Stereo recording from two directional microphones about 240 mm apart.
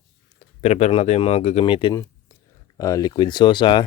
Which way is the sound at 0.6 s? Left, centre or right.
Left.